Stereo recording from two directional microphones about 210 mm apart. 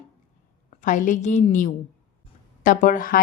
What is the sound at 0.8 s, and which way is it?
Speech, 35° left (ahead or behind).